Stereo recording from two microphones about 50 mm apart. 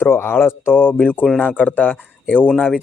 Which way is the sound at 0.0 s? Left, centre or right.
Left.